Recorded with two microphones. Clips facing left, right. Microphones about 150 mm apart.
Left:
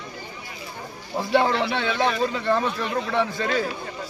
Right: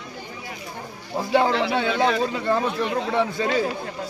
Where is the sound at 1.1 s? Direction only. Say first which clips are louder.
Right 1 dB; 10° right (ahead or behind).